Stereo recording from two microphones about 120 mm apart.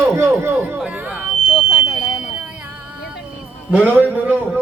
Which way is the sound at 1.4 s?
5° left (ahead or behind).